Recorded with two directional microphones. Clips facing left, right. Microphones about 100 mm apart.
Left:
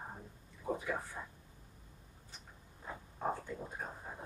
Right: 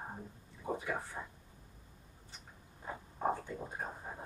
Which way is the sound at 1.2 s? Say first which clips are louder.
Right 2 dB; 30° right (ahead or behind).